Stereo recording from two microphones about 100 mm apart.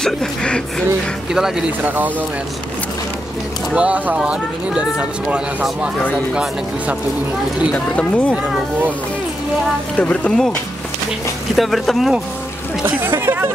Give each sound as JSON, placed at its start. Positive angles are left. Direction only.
{"t": 0.0, "sound": "speech", "side_deg": 10}
{"t": 1.8, "sound": "speech", "side_deg": -15}
{"t": 3.7, "sound": "speech", "side_deg": -10}
{"t": 7.7, "sound": "speech", "side_deg": 15}
{"t": 9.9, "sound": "speech", "side_deg": 10}
{"t": 11.5, "sound": "speech", "side_deg": 0}
{"t": 12.8, "sound": "speech", "side_deg": -20}